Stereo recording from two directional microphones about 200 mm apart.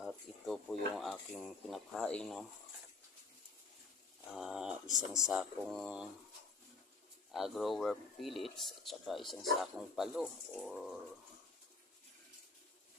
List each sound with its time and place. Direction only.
0.0 s speech: centre (ahead or behind)
4.4 s speech: 5° right (ahead or behind)
7.3 s speech: centre (ahead or behind)